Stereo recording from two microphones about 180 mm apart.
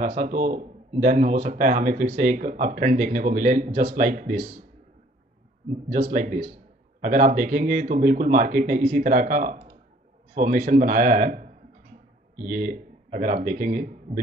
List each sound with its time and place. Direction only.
0.0 s speech: 45° right (ahead or behind)
5.9 s a man's voice: 50° right (ahead or behind)